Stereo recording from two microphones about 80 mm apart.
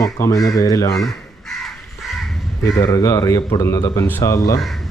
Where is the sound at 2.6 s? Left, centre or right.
Left.